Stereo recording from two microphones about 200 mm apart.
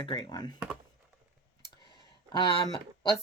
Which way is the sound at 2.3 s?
20° left (ahead or behind).